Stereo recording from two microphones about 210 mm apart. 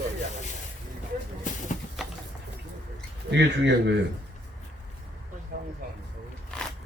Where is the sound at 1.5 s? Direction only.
35° left (ahead or behind).